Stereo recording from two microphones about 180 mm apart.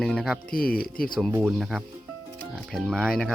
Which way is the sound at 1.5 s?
Centre (ahead or behind).